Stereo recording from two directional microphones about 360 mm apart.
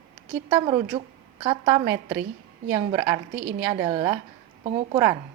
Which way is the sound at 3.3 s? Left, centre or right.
Right.